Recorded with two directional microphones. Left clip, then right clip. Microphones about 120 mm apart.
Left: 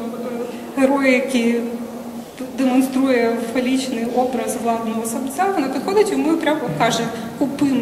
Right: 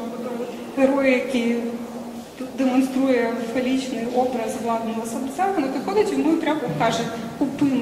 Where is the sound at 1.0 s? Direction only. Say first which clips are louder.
Left 3 dB; 40° left (ahead or behind).